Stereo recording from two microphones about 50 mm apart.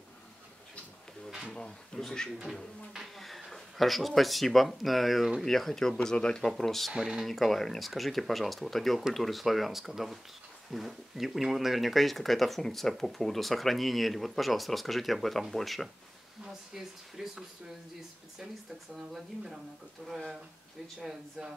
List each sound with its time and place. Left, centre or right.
1.5 s speech: centre
3.2 s speech: centre
6.5 s speech: centre
6.9 s speech: centre
7.2 s speech: centre
16.4 s speech: centre